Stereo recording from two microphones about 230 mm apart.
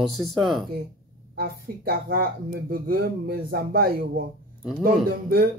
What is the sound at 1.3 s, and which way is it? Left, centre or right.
Speech, right.